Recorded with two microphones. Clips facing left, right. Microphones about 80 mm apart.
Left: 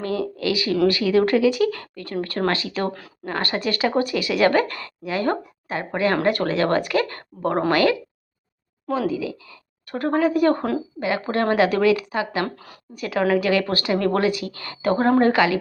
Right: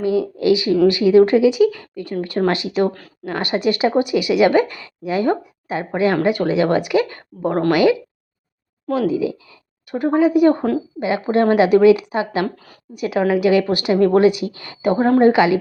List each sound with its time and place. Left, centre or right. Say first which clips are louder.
0.0 s a woman's voice: right 6 dB; centre
9.0 s a woman's voice: right 5 dB; right
9.9 s a woman's voice: right 5 dB; centre